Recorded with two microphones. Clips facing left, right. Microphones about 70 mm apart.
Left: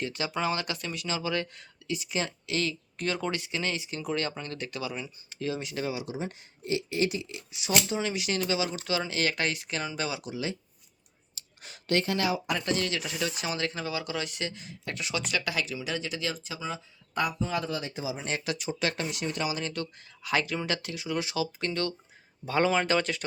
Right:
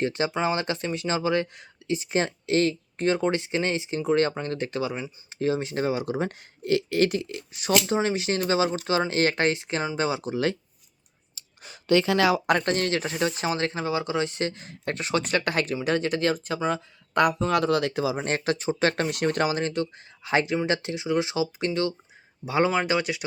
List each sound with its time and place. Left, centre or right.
0.0 s speech: right
7.9 s speech: right
12.1 s speech: right
12.5 s speech: right
18.2 s speech: right
18.9 s speech: right
19.7 s speech: right